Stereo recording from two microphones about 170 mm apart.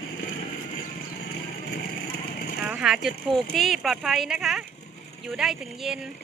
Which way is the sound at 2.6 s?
5° right (ahead or behind).